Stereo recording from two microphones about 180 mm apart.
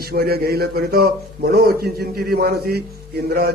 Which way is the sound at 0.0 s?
60° right (ahead or behind).